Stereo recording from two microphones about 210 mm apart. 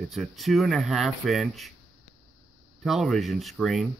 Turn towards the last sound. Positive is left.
turn(degrees=0)  # may be behind; listen again after turning